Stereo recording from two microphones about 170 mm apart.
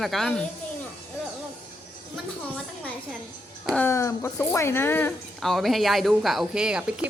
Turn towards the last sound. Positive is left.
turn(degrees=-5)  # may be behind; listen again after turning